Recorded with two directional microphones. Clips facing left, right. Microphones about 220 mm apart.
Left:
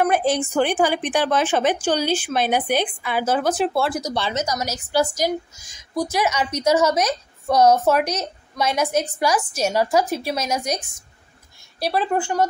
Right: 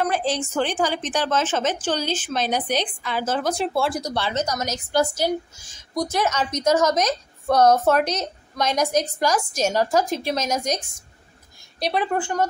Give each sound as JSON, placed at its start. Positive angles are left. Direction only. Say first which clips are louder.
{"t": 0.1, "sound": "a woman's voice", "louder": "left 4 dB", "side_deg": 55}
{"t": 0.4, "sound": "a woman's voice", "louder": "left 4 dB", "side_deg": 10}
{"t": 4.1, "sound": "a woman's voice", "louder": "left 1 dB", "side_deg": 10}